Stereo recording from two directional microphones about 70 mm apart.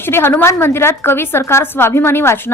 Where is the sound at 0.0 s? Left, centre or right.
Left.